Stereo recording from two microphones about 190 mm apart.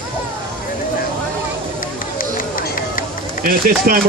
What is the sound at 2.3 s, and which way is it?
Run, 45° left (ahead or behind).